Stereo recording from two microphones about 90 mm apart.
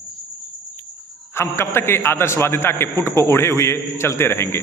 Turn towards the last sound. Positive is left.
turn(degrees=30)  # may be behind; listen again after turning